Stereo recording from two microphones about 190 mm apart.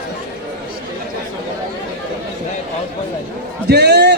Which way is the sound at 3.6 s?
60° right (ahead or behind).